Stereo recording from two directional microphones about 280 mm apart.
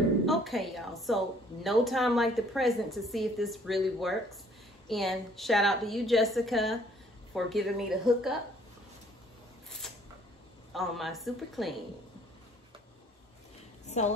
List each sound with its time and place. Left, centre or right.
0.2 s a woman's voice: centre
10.7 s a woman's voice: centre
13.8 s a sound: left